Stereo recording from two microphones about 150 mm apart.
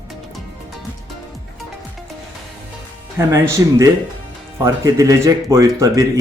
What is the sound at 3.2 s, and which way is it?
Speech, 20° right (ahead or behind).